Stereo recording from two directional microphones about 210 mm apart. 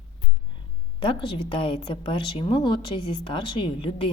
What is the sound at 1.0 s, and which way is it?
A woman's voice, 25° left (ahead or behind).